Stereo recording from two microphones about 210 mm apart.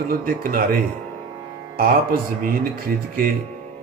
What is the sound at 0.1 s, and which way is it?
Speech, 45° right (ahead or behind).